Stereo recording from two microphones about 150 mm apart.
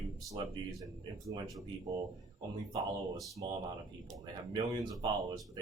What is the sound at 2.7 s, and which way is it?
Speech, 20° right (ahead or behind).